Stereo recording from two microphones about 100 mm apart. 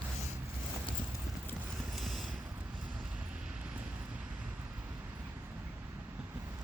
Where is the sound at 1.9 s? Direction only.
Centre (ahead or behind).